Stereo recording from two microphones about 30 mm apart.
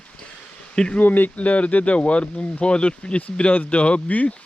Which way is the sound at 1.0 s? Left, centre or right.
Left.